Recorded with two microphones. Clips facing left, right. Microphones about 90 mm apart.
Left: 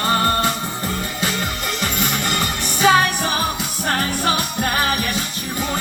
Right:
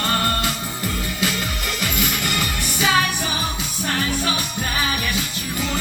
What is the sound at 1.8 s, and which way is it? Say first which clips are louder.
Music: left 1 dB; 40° left (ahead or behind).